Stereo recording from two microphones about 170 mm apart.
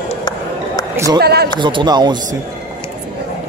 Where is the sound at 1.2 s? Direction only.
70° right (ahead or behind).